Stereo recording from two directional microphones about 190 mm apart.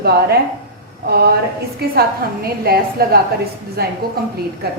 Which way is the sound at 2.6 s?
55° right (ahead or behind).